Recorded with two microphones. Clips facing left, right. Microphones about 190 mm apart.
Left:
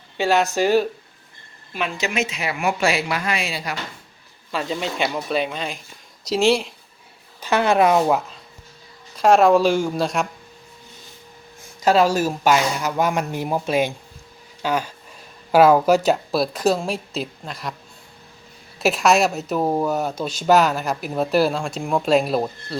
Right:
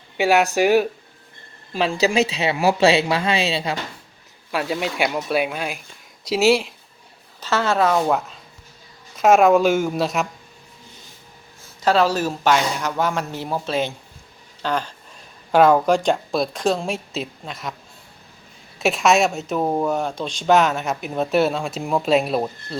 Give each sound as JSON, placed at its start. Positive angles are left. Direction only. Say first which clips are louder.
{"t": 0.2, "sound": "speech", "louder": "right 2 dB", "side_deg": -15}
{"t": 1.7, "sound": "speech", "louder": "right 6 dB", "side_deg": -35}
{"t": 4.5, "sound": "speech", "louder": "right 2 dB", "side_deg": -5}
{"t": 7.4, "sound": "speech", "louder": "left 2 dB", "side_deg": 15}
{"t": 8.0, "sound": "speech", "louder": "left 1 dB", "side_deg": 0}
{"t": 11.8, "sound": "speech", "louder": "left 1 dB", "side_deg": 10}
{"t": 14.6, "sound": "a sound", "louder": "left 1 dB", "side_deg": 10}
{"t": 15.5, "sound": "speech", "louder": "left 1 dB", "side_deg": 5}
{"t": 18.8, "sound": "speech", "louder": "even", "side_deg": 0}